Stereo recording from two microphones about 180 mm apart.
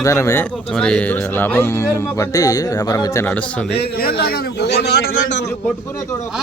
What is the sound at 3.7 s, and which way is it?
A man's voice, 60° left (ahead or behind).